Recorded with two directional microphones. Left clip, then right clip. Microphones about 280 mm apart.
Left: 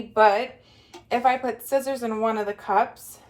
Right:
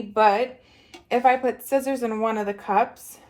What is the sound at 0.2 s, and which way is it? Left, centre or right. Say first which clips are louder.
Speech: even; right.